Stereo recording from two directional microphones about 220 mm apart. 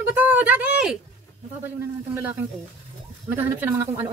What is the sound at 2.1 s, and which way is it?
Speech, 10° right (ahead or behind).